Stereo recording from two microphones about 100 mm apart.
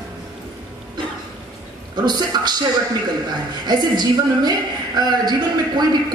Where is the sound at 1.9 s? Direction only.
45° right (ahead or behind).